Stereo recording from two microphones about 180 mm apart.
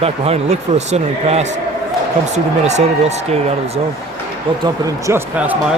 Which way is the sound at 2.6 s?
40° right (ahead or behind).